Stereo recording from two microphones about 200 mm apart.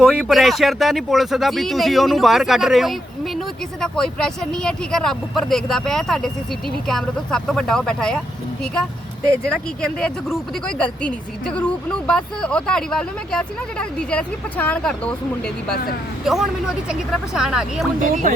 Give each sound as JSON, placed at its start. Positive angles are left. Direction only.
{"t": 0.0, "sound": "speech", "side_deg": -5}
{"t": 9.5, "sound": "speech", "side_deg": 5}
{"t": 16.2, "sound": "speech", "side_deg": 0}
{"t": 18.0, "sound": "speech", "side_deg": -40}